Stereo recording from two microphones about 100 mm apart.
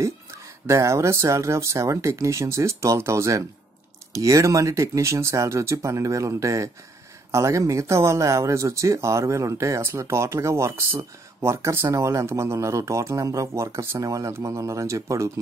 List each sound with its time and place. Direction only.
0.0 s speech: 30° right (ahead or behind)